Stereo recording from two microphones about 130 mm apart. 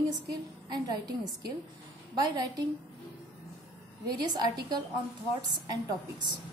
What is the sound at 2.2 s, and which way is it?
Speech, 35° right (ahead or behind).